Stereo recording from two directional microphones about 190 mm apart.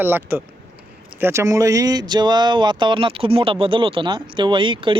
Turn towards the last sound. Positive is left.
turn(degrees=-25)  # may be behind; listen again after turning